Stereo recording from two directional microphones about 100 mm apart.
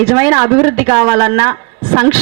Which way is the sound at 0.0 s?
20° right (ahead or behind).